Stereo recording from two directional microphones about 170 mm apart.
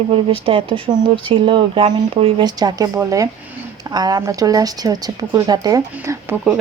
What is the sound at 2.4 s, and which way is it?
Speech, 20° right (ahead or behind).